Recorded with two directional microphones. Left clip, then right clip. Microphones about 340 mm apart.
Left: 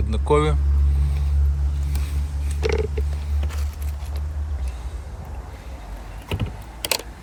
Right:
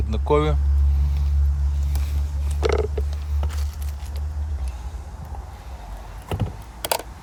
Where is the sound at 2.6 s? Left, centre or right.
Centre.